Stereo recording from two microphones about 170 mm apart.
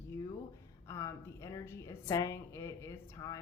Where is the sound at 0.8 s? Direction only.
15° left (ahead or behind).